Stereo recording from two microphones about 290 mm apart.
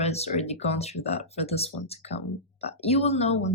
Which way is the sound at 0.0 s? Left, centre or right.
Left.